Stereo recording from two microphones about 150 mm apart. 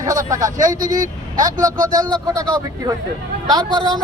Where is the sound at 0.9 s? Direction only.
60° right (ahead or behind).